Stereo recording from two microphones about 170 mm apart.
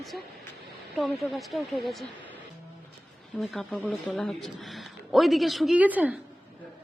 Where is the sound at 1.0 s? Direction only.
Centre (ahead or behind).